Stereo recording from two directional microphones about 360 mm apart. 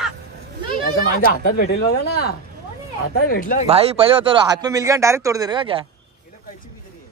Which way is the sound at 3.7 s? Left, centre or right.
Centre.